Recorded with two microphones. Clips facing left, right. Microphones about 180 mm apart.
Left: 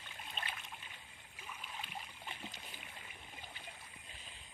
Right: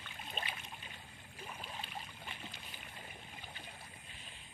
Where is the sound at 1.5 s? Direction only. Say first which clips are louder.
Right 1 dB; 30° right (ahead or behind).